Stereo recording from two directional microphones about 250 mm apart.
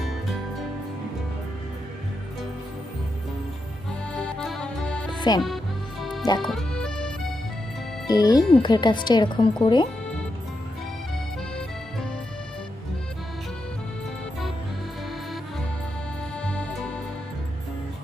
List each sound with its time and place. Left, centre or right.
4.1 s accordion: centre
5.3 s speech: centre
6.0 s music: centre
8.0 s speech: centre
16.4 s music: centre